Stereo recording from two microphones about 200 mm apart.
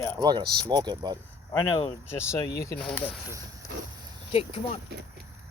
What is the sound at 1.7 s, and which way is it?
Speech, 20° left (ahead or behind).